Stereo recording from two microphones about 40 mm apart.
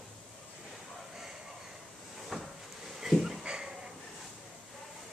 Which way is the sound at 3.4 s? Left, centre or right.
Right.